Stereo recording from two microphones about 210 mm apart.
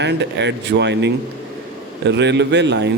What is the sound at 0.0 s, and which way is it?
Speech, 55° right (ahead or behind).